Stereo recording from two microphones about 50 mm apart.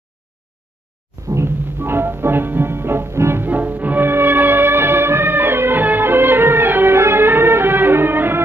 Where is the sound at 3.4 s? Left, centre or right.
Right.